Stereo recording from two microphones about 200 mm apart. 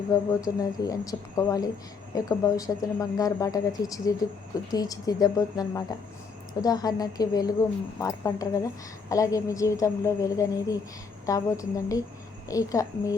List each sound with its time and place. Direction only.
0.1 s a woman's voice: 20° left (ahead or behind)